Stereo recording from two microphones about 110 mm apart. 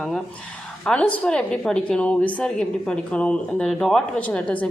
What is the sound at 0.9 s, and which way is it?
A woman's voice, 10° left (ahead or behind).